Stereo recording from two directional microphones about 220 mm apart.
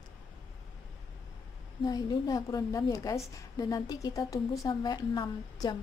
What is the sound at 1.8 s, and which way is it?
A woman's voice, 20° left (ahead or behind).